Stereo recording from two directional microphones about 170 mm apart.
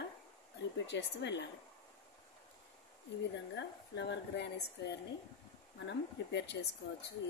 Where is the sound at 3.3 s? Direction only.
90° left.